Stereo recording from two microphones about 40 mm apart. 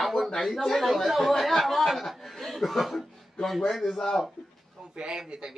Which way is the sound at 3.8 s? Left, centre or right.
Centre.